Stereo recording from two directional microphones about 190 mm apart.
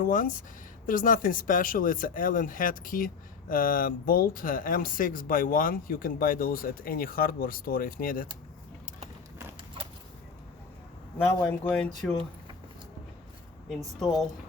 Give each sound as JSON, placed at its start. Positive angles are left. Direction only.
{"t": 0.0, "sound": "speech", "side_deg": 45}
{"t": 11.4, "sound": "speech", "side_deg": 5}
{"t": 13.7, "sound": "speech", "side_deg": 0}